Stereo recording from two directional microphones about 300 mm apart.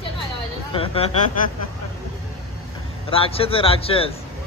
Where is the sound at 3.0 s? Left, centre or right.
Centre.